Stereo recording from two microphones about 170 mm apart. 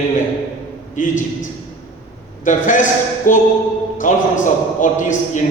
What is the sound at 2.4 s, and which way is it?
A man's voice, 50° left (ahead or behind).